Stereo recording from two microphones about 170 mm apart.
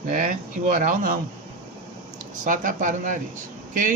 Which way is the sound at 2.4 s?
50° right (ahead or behind).